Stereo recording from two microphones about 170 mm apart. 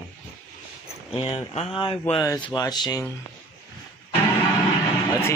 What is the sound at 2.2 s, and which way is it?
Speech, 25° left (ahead or behind).